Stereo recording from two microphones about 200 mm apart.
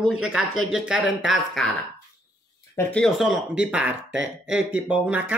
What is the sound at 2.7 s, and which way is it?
Speech, 5° left (ahead or behind).